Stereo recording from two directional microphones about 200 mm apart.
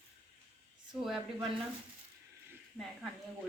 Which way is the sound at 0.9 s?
5° right (ahead or behind).